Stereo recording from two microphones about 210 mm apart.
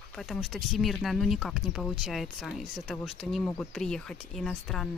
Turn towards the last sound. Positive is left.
turn(degrees=0)  # may be behind; listen again after turning